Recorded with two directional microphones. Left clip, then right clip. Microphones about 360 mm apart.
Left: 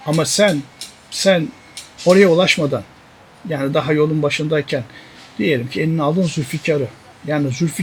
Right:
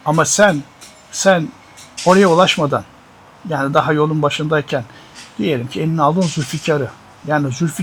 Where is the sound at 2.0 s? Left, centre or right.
Centre.